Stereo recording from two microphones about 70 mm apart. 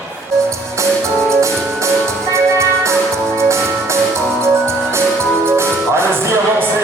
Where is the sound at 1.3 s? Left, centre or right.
Right.